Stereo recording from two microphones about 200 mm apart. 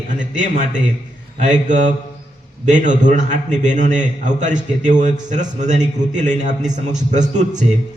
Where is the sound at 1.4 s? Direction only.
35° right (ahead or behind).